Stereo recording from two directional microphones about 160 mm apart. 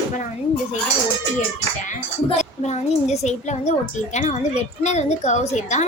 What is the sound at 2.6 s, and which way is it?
A woman's voice, 45° left (ahead or behind).